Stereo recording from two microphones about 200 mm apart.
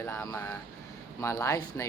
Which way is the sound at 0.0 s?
10° left (ahead or behind).